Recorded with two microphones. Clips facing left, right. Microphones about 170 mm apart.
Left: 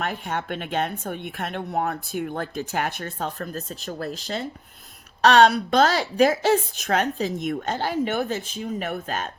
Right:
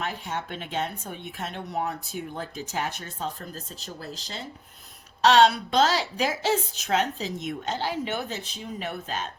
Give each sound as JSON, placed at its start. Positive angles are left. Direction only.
{"t": 0.0, "sound": "a woman's voice", "side_deg": 55}